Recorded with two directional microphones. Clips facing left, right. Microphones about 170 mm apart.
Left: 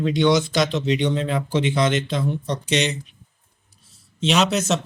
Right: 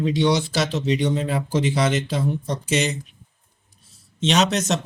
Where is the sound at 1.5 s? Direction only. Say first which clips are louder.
Even; 40° right (ahead or behind).